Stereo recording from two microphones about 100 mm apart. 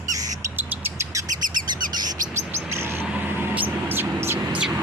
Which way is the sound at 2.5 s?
25° right (ahead or behind).